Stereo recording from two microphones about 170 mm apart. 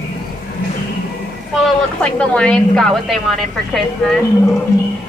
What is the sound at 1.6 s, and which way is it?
A woman's voice, 5° left (ahead or behind).